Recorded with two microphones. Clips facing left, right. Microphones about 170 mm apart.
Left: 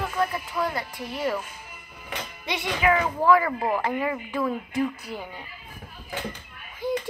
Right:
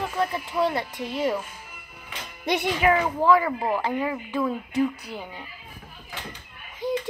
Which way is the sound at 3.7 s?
Centre (ahead or behind).